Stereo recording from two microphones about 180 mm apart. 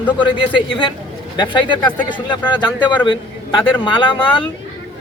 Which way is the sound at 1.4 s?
25° left (ahead or behind).